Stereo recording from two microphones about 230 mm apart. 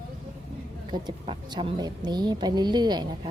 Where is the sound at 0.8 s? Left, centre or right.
Centre.